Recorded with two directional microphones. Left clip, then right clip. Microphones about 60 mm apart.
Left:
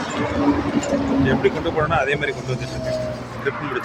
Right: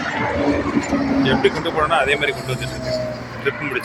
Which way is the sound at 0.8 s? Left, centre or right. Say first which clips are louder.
Right 1 dB; centre.